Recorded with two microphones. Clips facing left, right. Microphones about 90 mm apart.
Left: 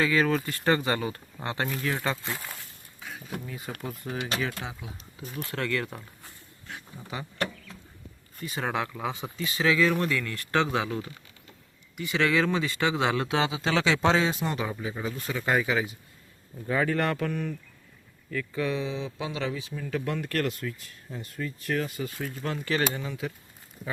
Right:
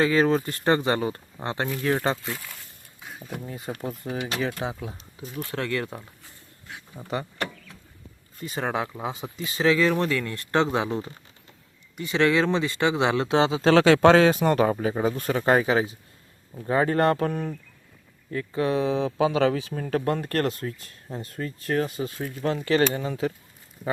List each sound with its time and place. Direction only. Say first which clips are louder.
0.0 s speech: right 4 dB; 30° right (ahead or behind)
2.2 s speech: right 1 dB; 20° left (ahead or behind)
3.1 s speech: right 1 dB; centre (ahead or behind)
3.7 s speech: right 5 dB; 25° right (ahead or behind)
8.4 s speech: right 3 dB; 35° right (ahead or behind)
8.6 s speech: right 2 dB; 20° right (ahead or behind); by 23.3 s 40° right (ahead or behind)